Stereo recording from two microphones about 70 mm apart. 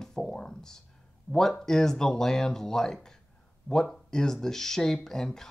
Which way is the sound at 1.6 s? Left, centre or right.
Centre.